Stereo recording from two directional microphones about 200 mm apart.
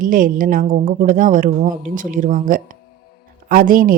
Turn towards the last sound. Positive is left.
turn(degrees=-45)  # may be behind; listen again after turning